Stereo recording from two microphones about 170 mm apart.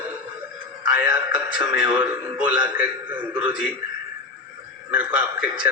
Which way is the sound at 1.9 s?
10° right (ahead or behind).